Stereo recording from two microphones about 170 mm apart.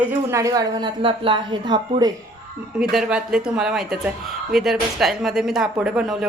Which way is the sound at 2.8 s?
Centre (ahead or behind).